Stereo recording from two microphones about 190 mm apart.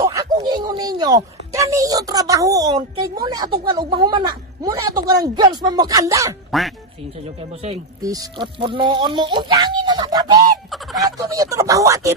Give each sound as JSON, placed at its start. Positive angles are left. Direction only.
{"t": 0.0, "sound": "speech", "side_deg": -15}
{"t": 6.5, "sound": "speech", "side_deg": 0}
{"t": 8.0, "sound": "speech", "side_deg": -20}
{"t": 10.7, "sound": "fowl", "side_deg": 0}
{"t": 11.2, "sound": "speech", "side_deg": -15}